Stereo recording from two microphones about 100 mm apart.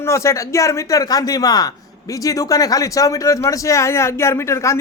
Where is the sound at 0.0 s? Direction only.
30° left (ahead or behind).